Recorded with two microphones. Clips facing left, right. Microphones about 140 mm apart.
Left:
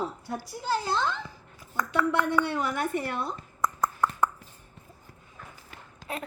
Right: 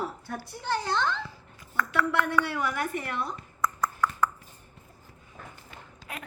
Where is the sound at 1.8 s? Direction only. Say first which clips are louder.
Left 1 dB; 20° left (ahead or behind).